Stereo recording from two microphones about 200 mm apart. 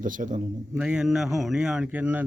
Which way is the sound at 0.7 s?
5° right (ahead or behind).